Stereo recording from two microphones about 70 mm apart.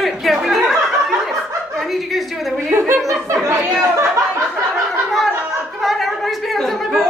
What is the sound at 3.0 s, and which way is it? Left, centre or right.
Speech, right.